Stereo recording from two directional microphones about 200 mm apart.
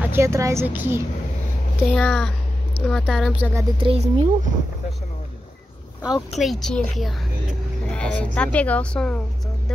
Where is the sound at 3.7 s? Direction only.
30° right (ahead or behind).